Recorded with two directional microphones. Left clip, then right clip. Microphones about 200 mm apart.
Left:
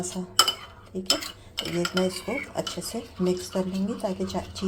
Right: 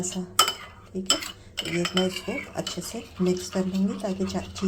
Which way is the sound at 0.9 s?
Centre (ahead or behind).